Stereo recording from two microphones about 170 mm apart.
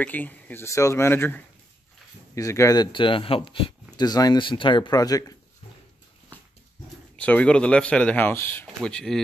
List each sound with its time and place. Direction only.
0.0 s speech: 10° left (ahead or behind)
7.2 s speech: 10° left (ahead or behind)